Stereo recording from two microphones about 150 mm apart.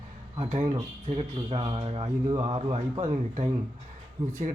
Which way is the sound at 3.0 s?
50° right (ahead or behind).